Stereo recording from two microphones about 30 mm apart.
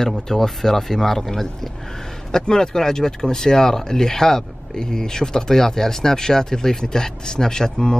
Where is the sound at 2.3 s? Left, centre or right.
Left.